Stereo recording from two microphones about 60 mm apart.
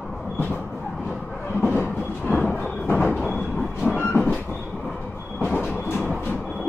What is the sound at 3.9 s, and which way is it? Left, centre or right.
Train, left.